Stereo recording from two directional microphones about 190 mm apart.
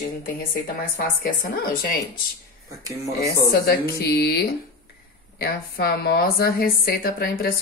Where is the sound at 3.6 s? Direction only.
55° left (ahead or behind).